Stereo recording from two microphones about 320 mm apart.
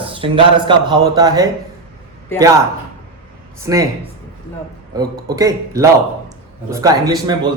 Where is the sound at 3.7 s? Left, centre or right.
Centre.